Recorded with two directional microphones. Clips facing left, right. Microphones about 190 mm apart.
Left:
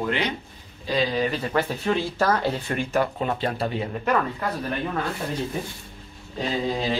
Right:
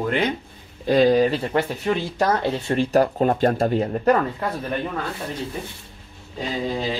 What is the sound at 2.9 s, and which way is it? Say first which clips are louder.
Speech: right 6 dB; 40° right (ahead or behind).